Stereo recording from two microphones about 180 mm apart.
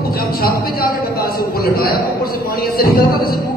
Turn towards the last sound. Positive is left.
turn(degrees=55)  # may be behind; listen again after turning